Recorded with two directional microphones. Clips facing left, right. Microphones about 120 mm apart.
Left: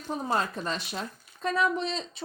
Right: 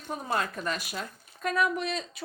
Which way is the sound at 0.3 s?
30° left (ahead or behind).